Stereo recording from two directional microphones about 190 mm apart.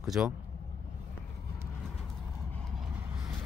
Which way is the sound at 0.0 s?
Centre (ahead or behind).